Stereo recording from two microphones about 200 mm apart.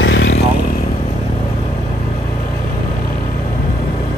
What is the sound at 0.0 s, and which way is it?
Vehicle, 65° left (ahead or behind).